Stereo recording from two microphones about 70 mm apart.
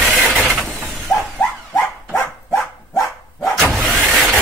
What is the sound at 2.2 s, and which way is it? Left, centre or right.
Dog, left.